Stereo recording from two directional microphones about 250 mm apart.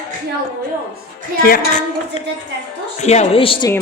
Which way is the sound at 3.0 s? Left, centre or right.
Left.